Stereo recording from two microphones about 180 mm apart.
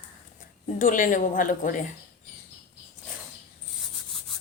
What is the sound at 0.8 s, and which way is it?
Speech, 50° left (ahead or behind).